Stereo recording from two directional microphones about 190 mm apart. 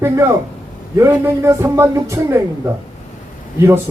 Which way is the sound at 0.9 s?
15° right (ahead or behind).